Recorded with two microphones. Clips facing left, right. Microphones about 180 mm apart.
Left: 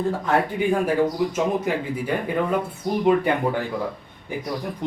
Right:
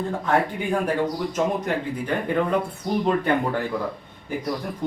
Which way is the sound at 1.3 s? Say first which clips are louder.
Left 1 dB; 5° left (ahead or behind).